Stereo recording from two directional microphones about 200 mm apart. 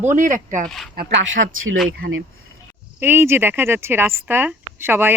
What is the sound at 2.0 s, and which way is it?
Speech, 60° right (ahead or behind).